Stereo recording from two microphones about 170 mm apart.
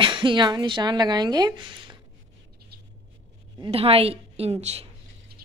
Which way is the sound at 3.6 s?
35° right (ahead or behind).